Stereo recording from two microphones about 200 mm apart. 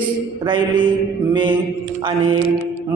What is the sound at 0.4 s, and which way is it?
Speech, 25° right (ahead or behind).